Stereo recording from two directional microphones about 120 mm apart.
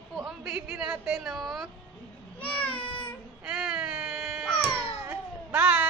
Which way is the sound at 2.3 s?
10° left (ahead or behind).